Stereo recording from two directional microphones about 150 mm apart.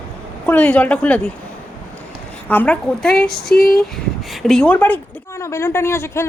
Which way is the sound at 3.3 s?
90° left.